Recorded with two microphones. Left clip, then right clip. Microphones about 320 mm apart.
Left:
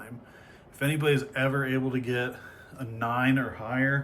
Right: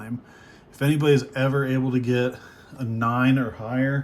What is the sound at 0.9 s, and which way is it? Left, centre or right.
A man's voice, centre.